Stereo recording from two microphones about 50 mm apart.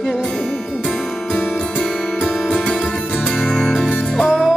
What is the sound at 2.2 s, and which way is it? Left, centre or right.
Music, centre.